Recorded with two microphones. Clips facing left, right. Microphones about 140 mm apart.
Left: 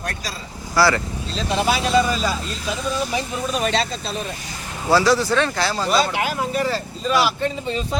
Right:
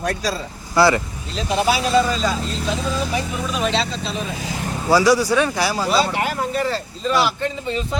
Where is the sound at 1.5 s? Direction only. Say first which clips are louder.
Right 2 dB; 5° right (ahead or behind).